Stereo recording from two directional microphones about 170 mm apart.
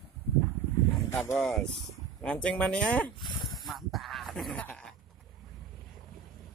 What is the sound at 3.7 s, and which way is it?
Goat, centre (ahead or behind).